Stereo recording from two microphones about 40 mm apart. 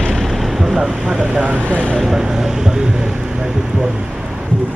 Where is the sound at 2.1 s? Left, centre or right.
Centre.